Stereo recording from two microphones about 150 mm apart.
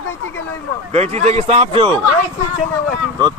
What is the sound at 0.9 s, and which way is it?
Speech, 45° right (ahead or behind).